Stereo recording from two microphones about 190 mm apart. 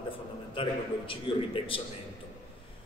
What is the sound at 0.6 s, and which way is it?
A man's voice, 25° left (ahead or behind).